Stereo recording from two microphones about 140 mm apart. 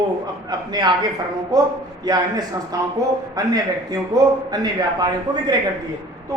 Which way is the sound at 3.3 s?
25° right (ahead or behind).